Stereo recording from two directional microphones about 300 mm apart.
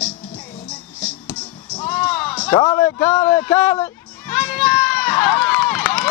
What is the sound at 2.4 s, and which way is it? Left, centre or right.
Speech, centre.